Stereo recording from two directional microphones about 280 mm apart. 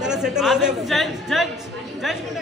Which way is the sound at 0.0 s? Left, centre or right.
Centre.